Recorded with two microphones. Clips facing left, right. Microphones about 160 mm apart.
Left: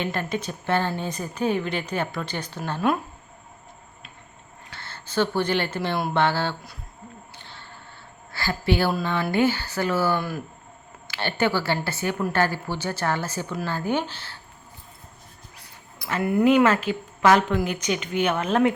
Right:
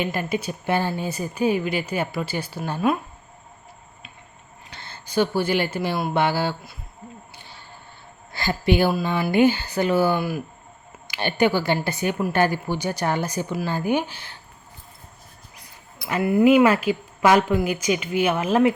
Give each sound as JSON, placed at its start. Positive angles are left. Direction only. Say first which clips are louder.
{"t": 0.0, "sound": "speech", "louder": "right 2 dB", "side_deg": -10}
{"t": 4.7, "sound": "speech", "louder": "right 3 dB", "side_deg": -15}
{"t": 7.3, "sound": "a sound", "louder": "even", "side_deg": -10}
{"t": 8.3, "sound": "a woman's voice", "louder": "right 3 dB", "side_deg": -20}
{"t": 16.0, "sound": "speech", "louder": "right 3 dB", "side_deg": -10}